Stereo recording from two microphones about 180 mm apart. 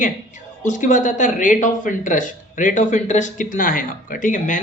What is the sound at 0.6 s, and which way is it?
A man's voice, 45° left (ahead or behind).